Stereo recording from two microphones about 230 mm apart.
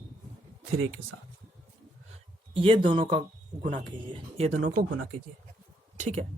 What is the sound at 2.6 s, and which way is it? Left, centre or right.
Speech, right.